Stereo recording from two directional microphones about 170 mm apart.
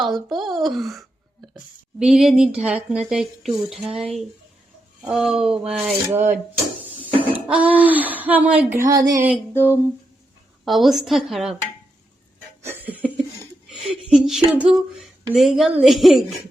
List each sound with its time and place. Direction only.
0.0 s a woman's voice: centre (ahead or behind)
8.9 s music: 20° right (ahead or behind)
9.6 s speech: 10° left (ahead or behind)
10.7 s a woman's voice: centre (ahead or behind)
12.6 s a sound: 10° right (ahead or behind)
13.7 s a woman's voice: centre (ahead or behind)